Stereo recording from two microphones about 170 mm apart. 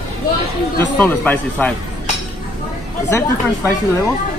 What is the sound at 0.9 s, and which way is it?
Speech, 10° left (ahead or behind).